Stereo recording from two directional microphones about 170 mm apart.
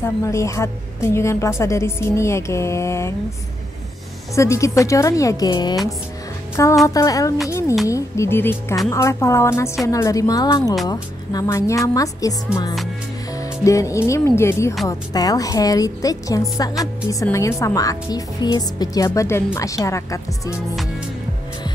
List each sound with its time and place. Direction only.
0.0 s a woman's voice: 15° left (ahead or behind)
4.4 s a woman's voice: 15° left (ahead or behind)
13.4 s a woman's voice: 20° left (ahead or behind)